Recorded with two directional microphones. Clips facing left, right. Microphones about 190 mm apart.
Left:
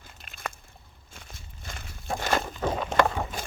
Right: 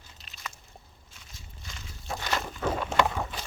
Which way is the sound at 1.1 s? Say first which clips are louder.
Left 5 dB; 55° left (ahead or behind).